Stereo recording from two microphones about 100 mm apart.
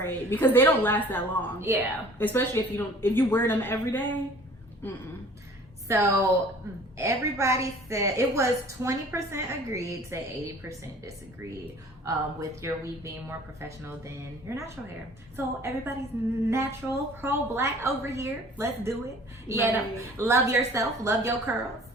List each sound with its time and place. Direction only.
0.0 s a woman's voice: 20° left (ahead or behind)
1.6 s a woman's voice: 25° right (ahead or behind)
2.1 s a woman's voice: 20° left (ahead or behind)
5.9 s a woman's voice: 30° right (ahead or behind)